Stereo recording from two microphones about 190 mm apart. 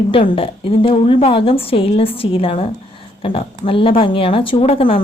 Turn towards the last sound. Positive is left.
turn(degrees=30)  # may be behind; listen again after turning